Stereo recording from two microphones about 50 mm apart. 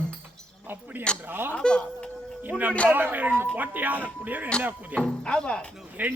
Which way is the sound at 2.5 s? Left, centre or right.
Right.